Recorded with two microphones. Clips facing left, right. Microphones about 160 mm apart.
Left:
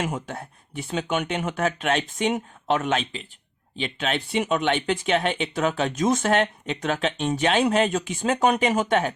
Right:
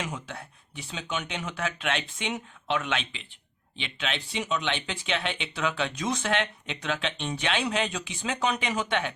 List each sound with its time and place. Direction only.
0.0 s speech: 50° left (ahead or behind)